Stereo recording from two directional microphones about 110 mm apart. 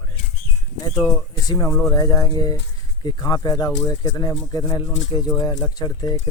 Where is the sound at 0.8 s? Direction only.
25° left (ahead or behind).